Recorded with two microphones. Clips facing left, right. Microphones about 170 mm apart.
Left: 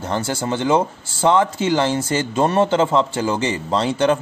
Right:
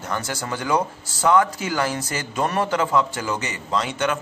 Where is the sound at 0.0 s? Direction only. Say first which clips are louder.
Left 6 dB; 30° left (ahead or behind).